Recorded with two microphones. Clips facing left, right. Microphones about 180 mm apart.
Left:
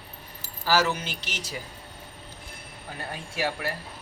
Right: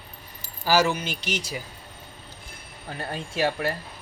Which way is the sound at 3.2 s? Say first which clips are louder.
Right 5 dB; 20° right (ahead or behind).